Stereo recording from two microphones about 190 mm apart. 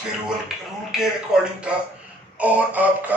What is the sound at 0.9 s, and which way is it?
Speech, 5° right (ahead or behind).